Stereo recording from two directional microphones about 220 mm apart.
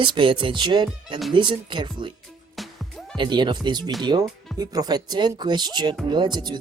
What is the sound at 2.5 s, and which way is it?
Music, centre (ahead or behind).